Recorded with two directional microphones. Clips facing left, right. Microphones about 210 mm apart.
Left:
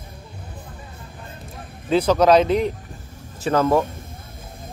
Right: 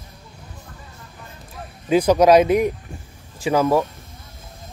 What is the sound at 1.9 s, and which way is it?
Speech, 15° right (ahead or behind).